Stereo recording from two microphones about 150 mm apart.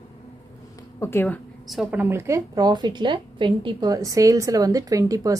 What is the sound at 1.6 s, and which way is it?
A woman's voice, centre (ahead or behind).